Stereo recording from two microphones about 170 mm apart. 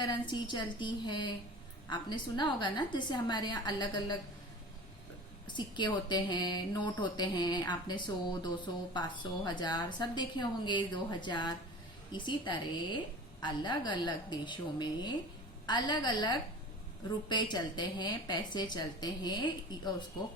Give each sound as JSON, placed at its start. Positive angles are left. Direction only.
{"t": 0.0, "sound": "speech", "side_deg": 25}
{"t": 5.5, "sound": "speech", "side_deg": 25}